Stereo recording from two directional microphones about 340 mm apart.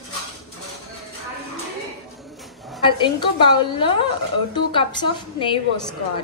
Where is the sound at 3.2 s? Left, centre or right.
Centre.